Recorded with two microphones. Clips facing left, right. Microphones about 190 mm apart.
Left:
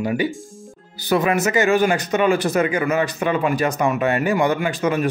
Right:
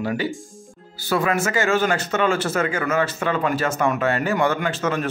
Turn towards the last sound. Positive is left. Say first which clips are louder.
# left 3 dB
turn(degrees=15)  # may be behind; listen again after turning